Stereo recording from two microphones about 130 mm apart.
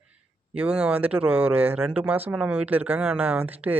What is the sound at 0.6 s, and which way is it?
Speech, 10° right (ahead or behind).